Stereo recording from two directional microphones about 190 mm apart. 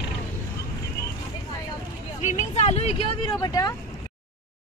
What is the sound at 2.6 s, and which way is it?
Vehicle, 35° left (ahead or behind).